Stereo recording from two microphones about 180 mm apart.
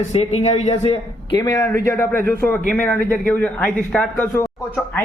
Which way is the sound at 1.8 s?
15° left (ahead or behind).